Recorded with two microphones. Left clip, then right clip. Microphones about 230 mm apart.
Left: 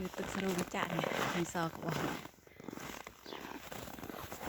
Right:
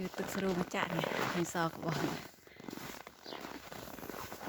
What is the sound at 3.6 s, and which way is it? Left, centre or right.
Purr, left.